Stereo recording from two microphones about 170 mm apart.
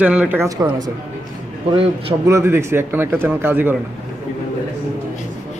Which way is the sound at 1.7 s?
30° right (ahead or behind).